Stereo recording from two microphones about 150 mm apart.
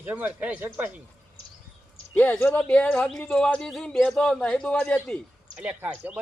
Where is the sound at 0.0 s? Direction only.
10° right (ahead or behind).